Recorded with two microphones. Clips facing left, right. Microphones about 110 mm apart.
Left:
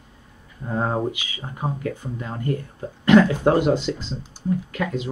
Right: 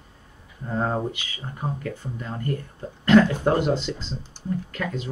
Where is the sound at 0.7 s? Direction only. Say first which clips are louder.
Left 2 dB; 20° left (ahead or behind).